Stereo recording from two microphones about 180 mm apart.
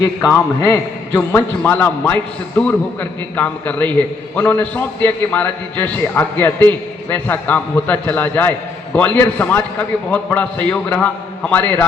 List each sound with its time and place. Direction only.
0.0 s a man's voice: 20° left (ahead or behind)